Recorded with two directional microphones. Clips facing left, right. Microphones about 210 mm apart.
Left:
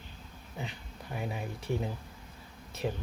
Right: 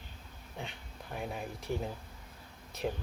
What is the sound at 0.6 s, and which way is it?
Speech, centre (ahead or behind).